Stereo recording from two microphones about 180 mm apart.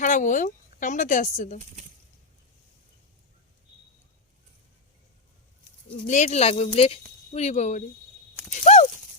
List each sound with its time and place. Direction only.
0.0 s a woman's voice: 45° left (ahead or behind)
6.1 s speech: 40° left (ahead or behind)